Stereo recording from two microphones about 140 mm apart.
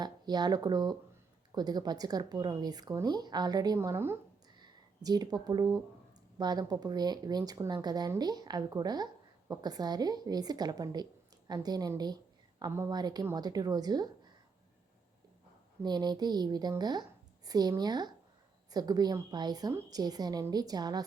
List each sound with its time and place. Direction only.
0.0 s a woman's voice: 30° right (ahead or behind)
3.8 s speech: 15° right (ahead or behind)
4.5 s a sound: 30° right (ahead or behind)
6.4 s a woman's voice: 30° right (ahead or behind)
15.8 s a woman's voice: 30° right (ahead or behind)